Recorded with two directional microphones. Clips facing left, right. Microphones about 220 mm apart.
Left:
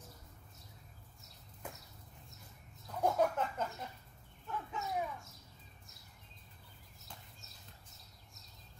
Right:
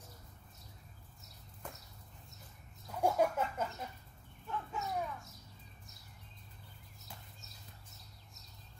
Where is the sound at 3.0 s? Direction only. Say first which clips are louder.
Right 1 dB; 10° right (ahead or behind).